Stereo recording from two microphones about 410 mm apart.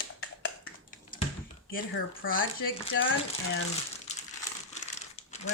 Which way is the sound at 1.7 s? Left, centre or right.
Left.